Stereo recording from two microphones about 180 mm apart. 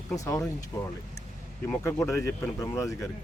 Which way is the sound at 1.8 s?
15° left (ahead or behind).